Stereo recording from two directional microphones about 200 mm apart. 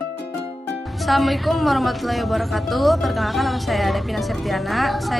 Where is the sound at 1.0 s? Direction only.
Centre (ahead or behind).